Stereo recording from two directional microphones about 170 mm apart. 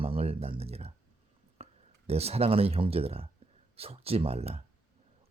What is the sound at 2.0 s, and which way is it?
Speech, 35° right (ahead or behind).